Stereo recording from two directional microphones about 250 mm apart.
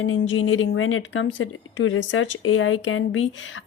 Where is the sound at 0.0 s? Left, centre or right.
Left.